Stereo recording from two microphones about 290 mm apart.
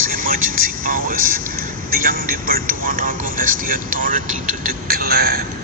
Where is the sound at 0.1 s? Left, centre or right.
Right.